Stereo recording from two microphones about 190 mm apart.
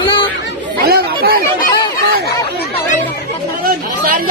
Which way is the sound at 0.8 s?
55° right (ahead or behind).